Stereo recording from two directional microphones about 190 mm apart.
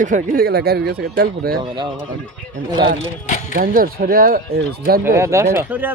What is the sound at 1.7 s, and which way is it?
Speech, 25° right (ahead or behind).